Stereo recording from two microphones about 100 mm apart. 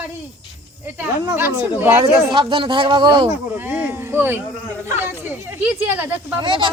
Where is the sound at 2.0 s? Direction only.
55° right (ahead or behind).